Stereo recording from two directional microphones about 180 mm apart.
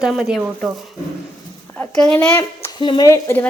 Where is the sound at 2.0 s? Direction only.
5° left (ahead or behind).